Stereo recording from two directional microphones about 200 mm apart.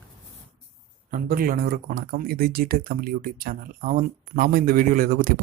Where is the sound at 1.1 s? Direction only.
45° right (ahead or behind).